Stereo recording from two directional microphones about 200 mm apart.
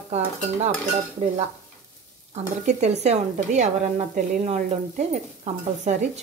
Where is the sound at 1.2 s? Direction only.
35° right (ahead or behind).